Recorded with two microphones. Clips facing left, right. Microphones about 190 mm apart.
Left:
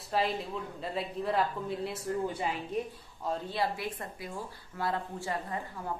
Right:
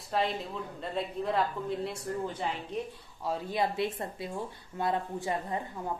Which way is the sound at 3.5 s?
20° right (ahead or behind).